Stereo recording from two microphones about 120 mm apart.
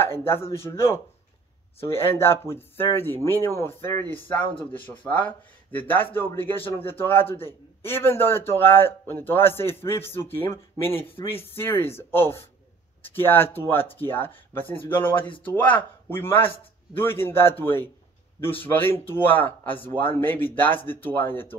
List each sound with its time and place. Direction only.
0.0 s a man's voice: 20° left (ahead or behind)